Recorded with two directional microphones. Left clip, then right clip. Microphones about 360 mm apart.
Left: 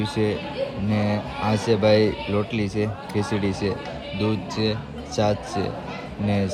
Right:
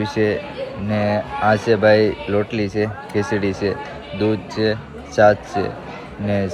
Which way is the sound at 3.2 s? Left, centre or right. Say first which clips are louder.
Right 6 dB; right.